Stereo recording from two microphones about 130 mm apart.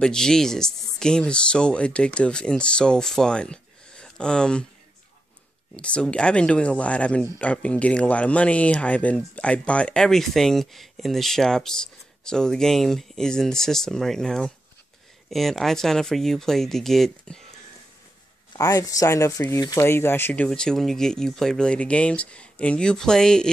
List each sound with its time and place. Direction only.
0.0 s speech: 5° left (ahead or behind)
5.8 s speech: 10° left (ahead or behind)
18.5 s speech: 30° left (ahead or behind)
20.4 s speech: 5° left (ahead or behind)